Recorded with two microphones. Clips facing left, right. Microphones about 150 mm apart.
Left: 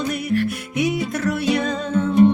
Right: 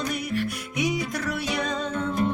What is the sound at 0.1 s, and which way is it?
Music, centre (ahead or behind).